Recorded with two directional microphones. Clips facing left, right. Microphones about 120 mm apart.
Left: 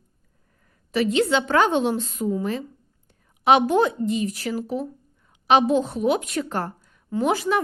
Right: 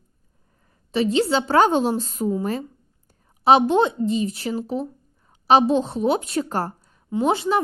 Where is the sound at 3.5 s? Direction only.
30° right (ahead or behind).